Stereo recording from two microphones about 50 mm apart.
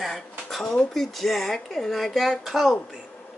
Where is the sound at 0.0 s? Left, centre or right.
Centre.